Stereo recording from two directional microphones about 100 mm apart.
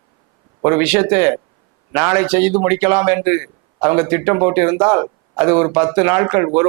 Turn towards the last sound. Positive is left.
turn(degrees=-20)  # may be behind; listen again after turning